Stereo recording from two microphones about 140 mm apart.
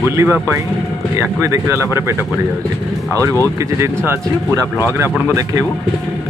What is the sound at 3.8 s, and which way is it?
Speech, 20° right (ahead or behind).